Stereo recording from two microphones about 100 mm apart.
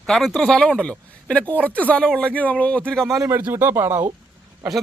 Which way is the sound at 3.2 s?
30° right (ahead or behind).